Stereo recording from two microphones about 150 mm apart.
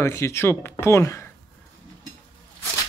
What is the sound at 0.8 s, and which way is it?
Speech, 15° left (ahead or behind).